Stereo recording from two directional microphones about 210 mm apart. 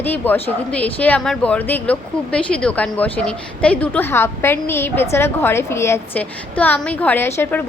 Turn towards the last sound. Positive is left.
turn(degrees=10)  # may be behind; listen again after turning